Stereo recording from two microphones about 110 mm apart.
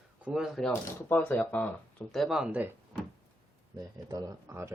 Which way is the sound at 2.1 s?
Centre (ahead or behind).